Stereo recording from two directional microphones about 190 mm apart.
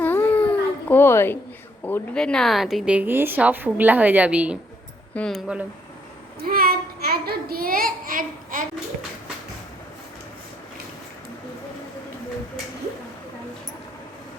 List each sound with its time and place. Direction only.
0.0 s baby cry: 10° left (ahead or behind)
0.9 s a woman's voice: 10° left (ahead or behind)
6.4 s child singing: 50° right (ahead or behind)